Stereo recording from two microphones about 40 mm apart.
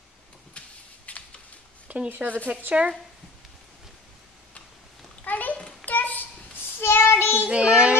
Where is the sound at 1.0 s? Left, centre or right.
Left.